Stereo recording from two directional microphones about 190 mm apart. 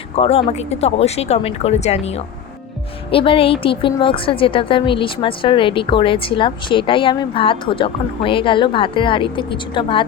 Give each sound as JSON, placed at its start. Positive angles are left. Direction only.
{"t": 0.2, "sound": "a woman's voice", "side_deg": 30}